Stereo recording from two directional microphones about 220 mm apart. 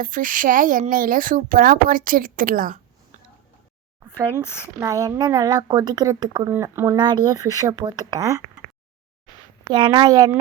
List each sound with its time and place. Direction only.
0.0 s speech: 40° right (ahead or behind)
4.8 s a woman's voice: 15° right (ahead or behind)
9.6 s a woman's voice: 20° right (ahead or behind)